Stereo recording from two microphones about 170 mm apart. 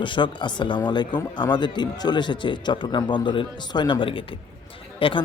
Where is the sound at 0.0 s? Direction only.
30° left (ahead or behind).